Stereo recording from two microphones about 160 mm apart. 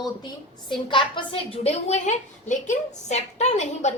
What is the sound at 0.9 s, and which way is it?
A woman's voice, 30° left (ahead or behind).